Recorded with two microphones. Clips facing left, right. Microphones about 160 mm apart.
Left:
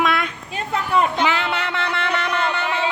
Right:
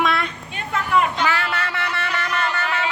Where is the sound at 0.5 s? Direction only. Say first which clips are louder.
Even; 35° left (ahead or behind).